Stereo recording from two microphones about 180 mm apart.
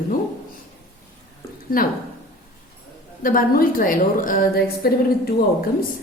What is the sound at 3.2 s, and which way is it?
A woman's voice, 50° left (ahead or behind).